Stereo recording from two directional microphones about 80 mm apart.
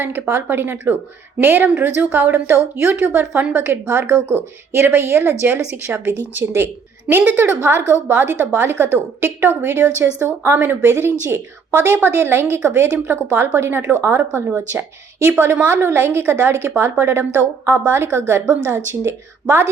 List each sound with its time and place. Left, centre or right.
0.0 s speech: right
3.7 s a woman's voice: right